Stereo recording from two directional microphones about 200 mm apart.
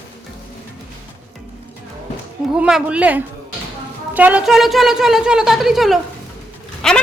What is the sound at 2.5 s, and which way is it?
A woman's voice, 5° right (ahead or behind).